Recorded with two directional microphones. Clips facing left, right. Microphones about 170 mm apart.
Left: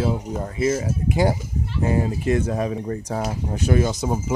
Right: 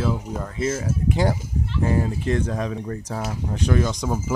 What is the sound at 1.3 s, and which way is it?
Speech, 20° left (ahead or behind).